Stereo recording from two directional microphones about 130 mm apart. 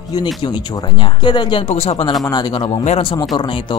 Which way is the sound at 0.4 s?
35° left (ahead or behind).